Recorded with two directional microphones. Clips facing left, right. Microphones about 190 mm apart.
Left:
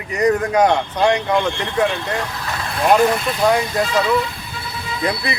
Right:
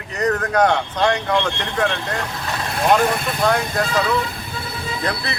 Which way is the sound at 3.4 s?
10° left (ahead or behind).